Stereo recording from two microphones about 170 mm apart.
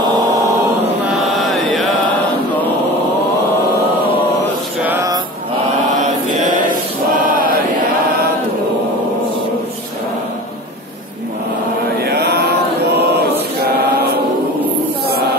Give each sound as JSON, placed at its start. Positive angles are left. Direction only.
{"t": 1.1, "sound": "chant", "side_deg": 0}
{"t": 7.2, "sound": "chant", "side_deg": -60}
{"t": 12.0, "sound": "chant", "side_deg": -70}